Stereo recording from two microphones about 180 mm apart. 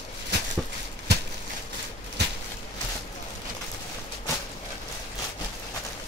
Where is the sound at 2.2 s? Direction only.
70° right (ahead or behind).